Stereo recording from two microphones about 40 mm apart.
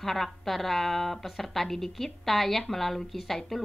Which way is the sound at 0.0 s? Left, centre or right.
Centre.